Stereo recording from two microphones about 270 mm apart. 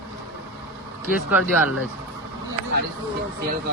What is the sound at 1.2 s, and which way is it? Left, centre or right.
Speech, centre.